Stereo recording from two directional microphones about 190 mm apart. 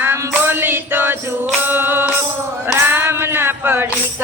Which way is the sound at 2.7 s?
10° right (ahead or behind).